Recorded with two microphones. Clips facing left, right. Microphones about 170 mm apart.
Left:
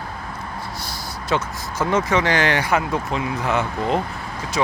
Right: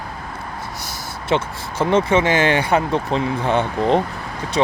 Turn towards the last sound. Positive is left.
turn(degrees=-30)  # may be behind; listen again after turning